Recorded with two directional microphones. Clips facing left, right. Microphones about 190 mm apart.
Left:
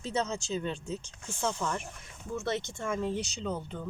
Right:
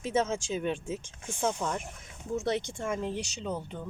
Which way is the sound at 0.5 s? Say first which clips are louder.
Right 2 dB; 15° right (ahead or behind).